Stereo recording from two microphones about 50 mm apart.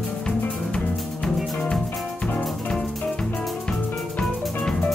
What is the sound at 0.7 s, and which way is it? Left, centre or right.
Music, centre.